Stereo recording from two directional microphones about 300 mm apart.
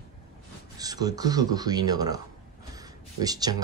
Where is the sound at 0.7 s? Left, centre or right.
Centre.